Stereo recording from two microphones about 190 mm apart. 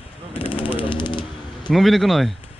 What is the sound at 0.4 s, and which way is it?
Machine gun, 30° left (ahead or behind).